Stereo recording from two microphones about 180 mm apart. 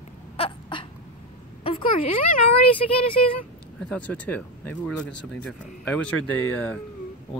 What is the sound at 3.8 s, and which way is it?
Speech, 5° left (ahead or behind).